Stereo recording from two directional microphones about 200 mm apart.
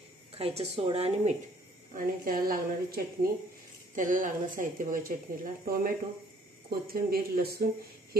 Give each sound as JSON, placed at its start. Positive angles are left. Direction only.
{"t": 0.3, "sound": "a woman's voice", "side_deg": -30}
{"t": 2.0, "sound": "speech", "side_deg": -45}